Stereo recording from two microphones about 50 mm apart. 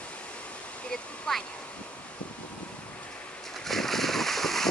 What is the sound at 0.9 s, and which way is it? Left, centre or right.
Waterfall, centre.